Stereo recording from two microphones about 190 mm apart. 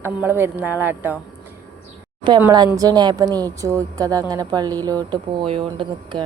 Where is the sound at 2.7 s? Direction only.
20° right (ahead or behind).